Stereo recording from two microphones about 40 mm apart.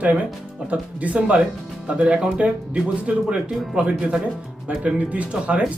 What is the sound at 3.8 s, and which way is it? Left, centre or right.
Speech, right.